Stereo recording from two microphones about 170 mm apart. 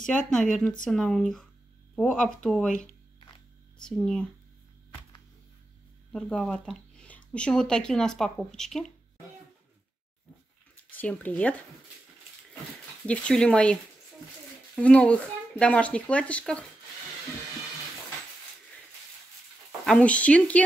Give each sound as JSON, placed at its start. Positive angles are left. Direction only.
{"t": 0.0, "sound": "speech", "side_deg": 5}
{"t": 3.2, "sound": "a sound", "side_deg": 30}
{"t": 3.8, "sound": "speech", "side_deg": 5}
{"t": 6.1, "sound": "speech", "side_deg": 5}
{"t": 11.0, "sound": "speech", "side_deg": 10}
{"t": 13.0, "sound": "speech", "side_deg": 5}
{"t": 14.8, "sound": "speech", "side_deg": 5}
{"t": 19.9, "sound": "speech", "side_deg": 10}